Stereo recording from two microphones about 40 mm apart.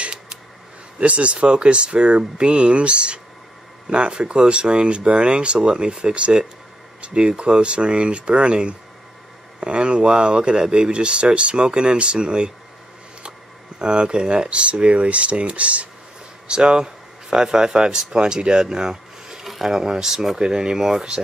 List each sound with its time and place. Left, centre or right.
0.0 s a sound: right
1.0 s speech: right
13.7 s speech: right
16.4 s speech: right
19.4 s speech: centre